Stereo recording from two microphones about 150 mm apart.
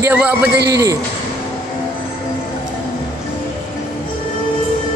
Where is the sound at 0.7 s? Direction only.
20° right (ahead or behind).